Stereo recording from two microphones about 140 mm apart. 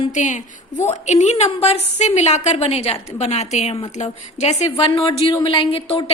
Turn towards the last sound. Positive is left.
turn(degrees=40)  # may be behind; listen again after turning